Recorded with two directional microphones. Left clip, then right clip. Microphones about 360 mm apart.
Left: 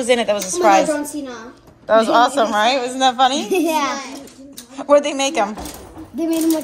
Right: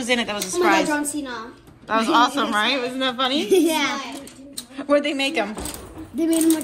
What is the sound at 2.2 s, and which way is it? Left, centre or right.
A woman's voice, centre.